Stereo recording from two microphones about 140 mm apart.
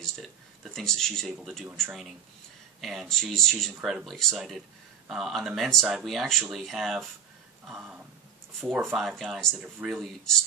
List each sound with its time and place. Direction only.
0.0 s a man's voice: 5° left (ahead or behind)
2.8 s speech: centre (ahead or behind)